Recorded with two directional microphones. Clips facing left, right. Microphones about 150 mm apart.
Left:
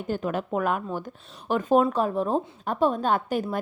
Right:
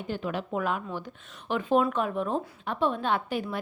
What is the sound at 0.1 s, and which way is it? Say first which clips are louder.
A woman's voice: left 4 dB; 45° left (ahead or behind).